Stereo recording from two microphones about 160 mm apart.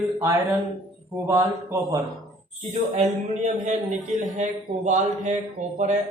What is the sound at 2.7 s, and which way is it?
A man's voice, 45° right (ahead or behind).